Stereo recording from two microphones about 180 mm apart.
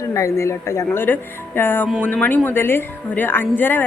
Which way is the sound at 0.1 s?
15° left (ahead or behind).